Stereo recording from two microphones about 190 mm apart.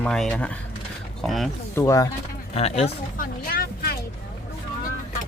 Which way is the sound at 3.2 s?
50° left (ahead or behind).